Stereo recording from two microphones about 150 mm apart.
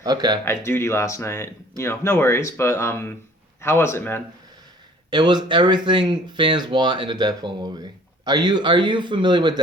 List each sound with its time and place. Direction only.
0.0 s speech: 25° right (ahead or behind)
0.4 s speech: 15° left (ahead or behind)
5.1 s speech: 30° right (ahead or behind)